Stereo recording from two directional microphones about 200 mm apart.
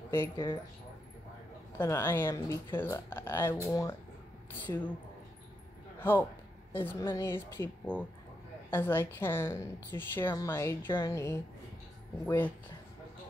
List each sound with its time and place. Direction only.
0.1 s a woman's voice: 10° left (ahead or behind)
1.8 s a woman's voice: 10° left (ahead or behind)
4.6 s a woman's voice: 10° left (ahead or behind)
5.9 s a sound: 10° left (ahead or behind)
6.7 s a woman's voice: 10° left (ahead or behind)